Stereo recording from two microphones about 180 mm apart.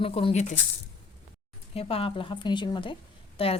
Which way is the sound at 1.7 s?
30° left (ahead or behind).